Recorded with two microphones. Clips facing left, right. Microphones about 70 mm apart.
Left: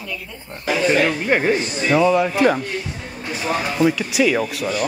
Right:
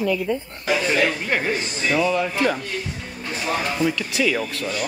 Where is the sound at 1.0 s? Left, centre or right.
Centre.